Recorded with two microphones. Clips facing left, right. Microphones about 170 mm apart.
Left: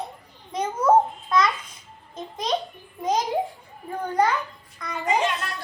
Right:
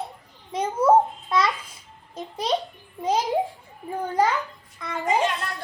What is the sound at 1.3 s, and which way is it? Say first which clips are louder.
Child singing: left 1 dB; 30° right (ahead or behind).